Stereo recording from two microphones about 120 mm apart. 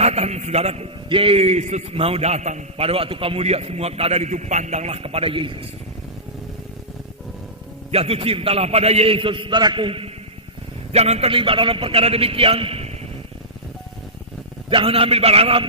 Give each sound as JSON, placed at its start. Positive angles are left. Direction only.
{"t": 0.0, "sound": "a man's voice", "side_deg": -65}
{"t": 7.9, "sound": "a man's voice", "side_deg": -55}
{"t": 10.9, "sound": "a man's voice", "side_deg": -60}
{"t": 14.7, "sound": "a man's voice", "side_deg": -50}